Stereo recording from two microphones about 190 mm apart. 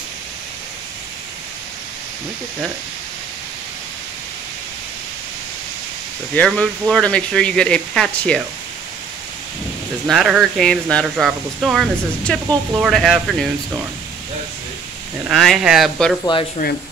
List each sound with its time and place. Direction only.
6.3 s speech: 5° left (ahead or behind)
10.0 s speech: centre (ahead or behind)
15.2 s speech: centre (ahead or behind)
16.6 s speech: 45° left (ahead or behind)